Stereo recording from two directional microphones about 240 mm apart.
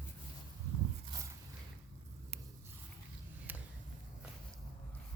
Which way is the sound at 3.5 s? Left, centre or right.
Centre.